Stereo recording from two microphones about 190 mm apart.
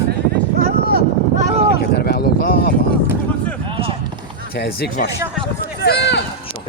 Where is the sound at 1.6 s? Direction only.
55° left (ahead or behind).